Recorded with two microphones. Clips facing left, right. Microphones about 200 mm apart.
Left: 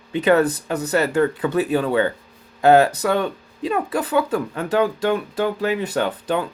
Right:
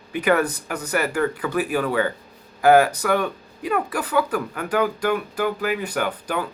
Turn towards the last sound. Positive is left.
turn(degrees=25)  # may be behind; listen again after turning